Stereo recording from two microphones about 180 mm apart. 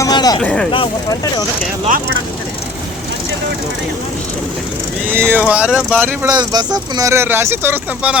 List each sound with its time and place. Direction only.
0.0 s a sound: 20° left (ahead or behind)
0.4 s speech: 5° left (ahead or behind)
0.7 s speech: 25° left (ahead or behind)
5.1 s speech: 10° right (ahead or behind)
6.2 s speech: 20° right (ahead or behind)